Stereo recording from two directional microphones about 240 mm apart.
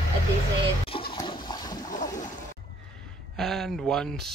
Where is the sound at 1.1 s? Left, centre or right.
Centre.